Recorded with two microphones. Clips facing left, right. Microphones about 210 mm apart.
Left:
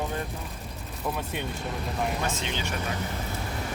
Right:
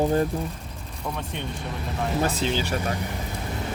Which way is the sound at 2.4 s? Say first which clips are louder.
Right 7 dB; 35° right (ahead or behind).